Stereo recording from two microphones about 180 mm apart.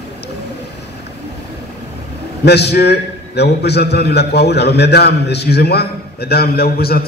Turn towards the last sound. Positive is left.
turn(degrees=60)  # may be behind; listen again after turning